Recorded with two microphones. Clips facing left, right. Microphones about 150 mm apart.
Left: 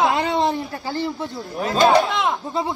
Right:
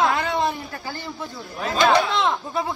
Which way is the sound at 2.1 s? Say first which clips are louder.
Even; 10° left (ahead or behind).